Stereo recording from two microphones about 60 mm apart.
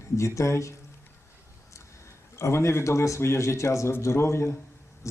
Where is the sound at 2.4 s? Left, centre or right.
Left.